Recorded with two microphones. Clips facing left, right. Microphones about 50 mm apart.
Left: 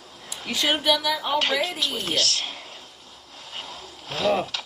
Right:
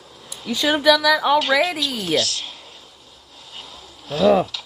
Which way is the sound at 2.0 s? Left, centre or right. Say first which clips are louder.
Right 4 dB; left.